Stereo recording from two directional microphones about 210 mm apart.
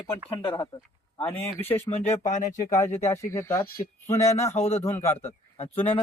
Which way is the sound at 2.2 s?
35° left (ahead or behind).